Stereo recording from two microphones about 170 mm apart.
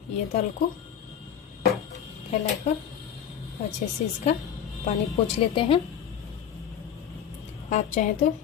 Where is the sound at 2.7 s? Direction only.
45° left (ahead or behind).